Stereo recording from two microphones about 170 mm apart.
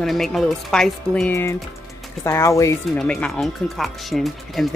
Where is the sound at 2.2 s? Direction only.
15° left (ahead or behind).